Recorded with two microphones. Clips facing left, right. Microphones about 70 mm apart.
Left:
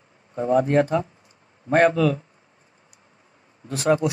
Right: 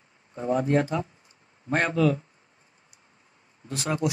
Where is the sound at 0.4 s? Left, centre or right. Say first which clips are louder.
Left 5 dB; left.